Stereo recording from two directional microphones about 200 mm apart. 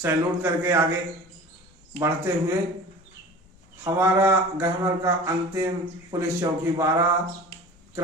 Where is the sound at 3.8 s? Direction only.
15° right (ahead or behind).